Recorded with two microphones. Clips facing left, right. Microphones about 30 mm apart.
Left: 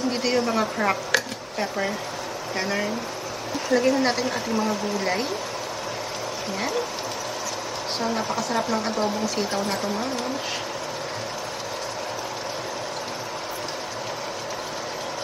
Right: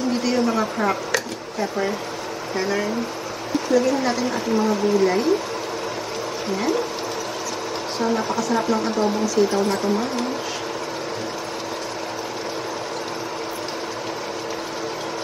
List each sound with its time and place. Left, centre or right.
0.1 s a sound: centre
0.5 s a woman's voice: centre
2.6 s a woman's voice: centre
5.0 s a woman's voice: centre
6.5 s speech: centre
8.0 s speech: centre